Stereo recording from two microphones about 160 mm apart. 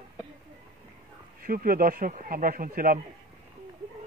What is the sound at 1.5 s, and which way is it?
Speech, 65° right (ahead or behind).